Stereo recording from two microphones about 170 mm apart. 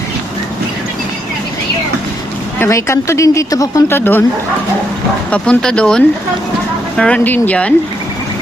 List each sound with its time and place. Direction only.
2.6 s speech: 15° left (ahead or behind)
5.3 s speech: 5° left (ahead or behind)